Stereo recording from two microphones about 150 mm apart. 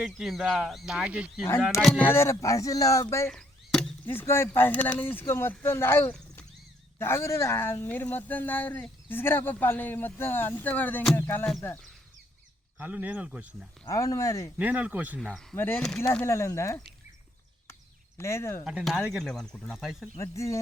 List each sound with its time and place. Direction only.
0.0 s speech: 5° right (ahead or behind)
1.8 s speech: 10° left (ahead or behind)
3.2 s speech: 5° left (ahead or behind)
12.8 s speech: 10° right (ahead or behind)
13.8 s speech: 20° left (ahead or behind)
14.6 s speech: 10° right (ahead or behind)
15.5 s speech: 15° left (ahead or behind)
18.2 s speech: 20° left (ahead or behind)
18.6 s speech: 5° right (ahead or behind)
20.1 s speech: 20° left (ahead or behind)